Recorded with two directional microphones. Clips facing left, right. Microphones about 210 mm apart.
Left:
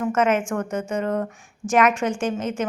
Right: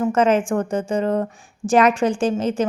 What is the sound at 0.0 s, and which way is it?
Speech, 30° right (ahead or behind).